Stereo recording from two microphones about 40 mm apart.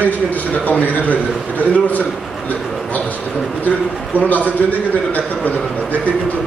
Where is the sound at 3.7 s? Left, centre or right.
Left.